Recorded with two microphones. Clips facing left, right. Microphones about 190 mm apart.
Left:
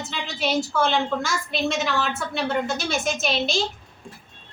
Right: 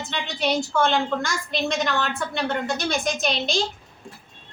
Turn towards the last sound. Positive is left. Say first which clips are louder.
# even
turn(degrees=5)  # may be behind; listen again after turning